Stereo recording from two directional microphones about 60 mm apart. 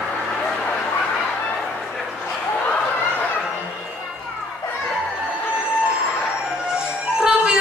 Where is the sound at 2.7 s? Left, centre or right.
Left.